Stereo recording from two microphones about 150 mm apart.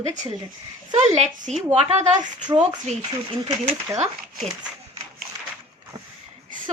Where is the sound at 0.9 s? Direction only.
50° right (ahead or behind).